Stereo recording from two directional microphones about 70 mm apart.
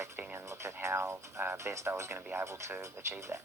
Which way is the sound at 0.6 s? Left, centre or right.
Right.